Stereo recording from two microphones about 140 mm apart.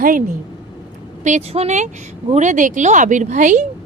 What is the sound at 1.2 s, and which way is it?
Speech, 55° right (ahead or behind).